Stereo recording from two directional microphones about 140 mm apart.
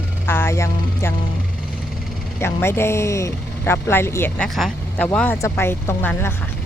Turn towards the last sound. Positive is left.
turn(degrees=15)  # may be behind; listen again after turning